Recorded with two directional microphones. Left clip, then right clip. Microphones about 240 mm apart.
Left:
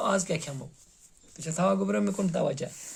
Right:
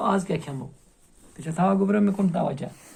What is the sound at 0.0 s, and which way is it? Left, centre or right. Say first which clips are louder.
Speech: right 3 dB; left.